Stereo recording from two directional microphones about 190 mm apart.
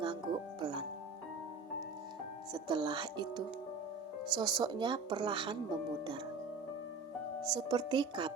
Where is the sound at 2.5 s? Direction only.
25° right (ahead or behind).